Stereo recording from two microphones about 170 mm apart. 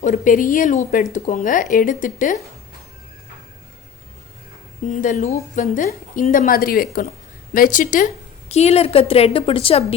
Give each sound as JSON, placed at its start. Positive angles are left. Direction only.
{"t": 0.0, "sound": "speech", "side_deg": 50}
{"t": 4.9, "sound": "speech", "side_deg": 50}